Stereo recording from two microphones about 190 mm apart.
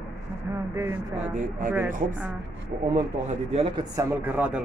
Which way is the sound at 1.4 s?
45° right (ahead or behind).